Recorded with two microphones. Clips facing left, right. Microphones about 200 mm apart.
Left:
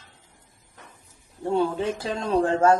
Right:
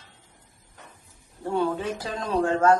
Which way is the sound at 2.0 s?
25° left (ahead or behind).